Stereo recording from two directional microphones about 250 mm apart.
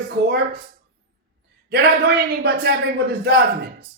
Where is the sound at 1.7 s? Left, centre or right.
Right.